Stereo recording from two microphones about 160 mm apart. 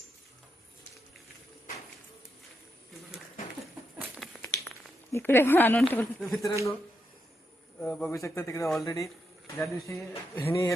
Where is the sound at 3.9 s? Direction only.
Centre (ahead or behind).